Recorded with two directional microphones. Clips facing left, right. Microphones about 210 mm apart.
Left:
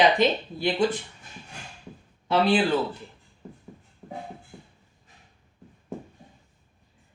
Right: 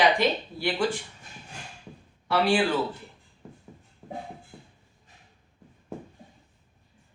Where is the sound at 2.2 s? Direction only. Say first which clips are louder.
Left 2 dB; 20° left (ahead or behind).